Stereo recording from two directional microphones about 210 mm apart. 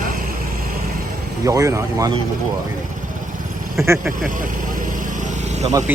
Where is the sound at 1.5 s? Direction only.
15° right (ahead or behind).